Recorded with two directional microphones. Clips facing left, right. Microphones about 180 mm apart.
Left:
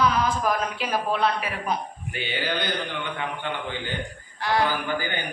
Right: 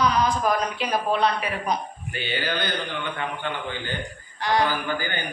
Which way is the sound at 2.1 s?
15° left (ahead or behind).